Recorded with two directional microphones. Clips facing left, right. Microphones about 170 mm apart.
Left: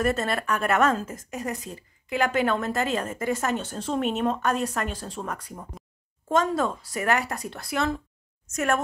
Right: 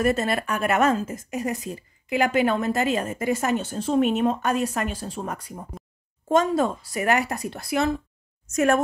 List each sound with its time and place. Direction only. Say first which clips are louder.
0.0 s speech: right 3 dB; 10° right (ahead or behind)
8.5 s a woman's voice: right 5 dB; 20° right (ahead or behind)